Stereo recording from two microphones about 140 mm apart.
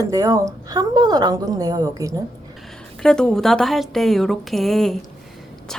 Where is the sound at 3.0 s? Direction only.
5° left (ahead or behind).